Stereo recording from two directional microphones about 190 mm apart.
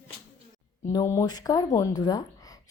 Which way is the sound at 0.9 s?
15° left (ahead or behind).